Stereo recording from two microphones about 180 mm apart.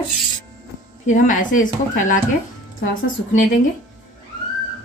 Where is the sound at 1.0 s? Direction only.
45° left (ahead or behind).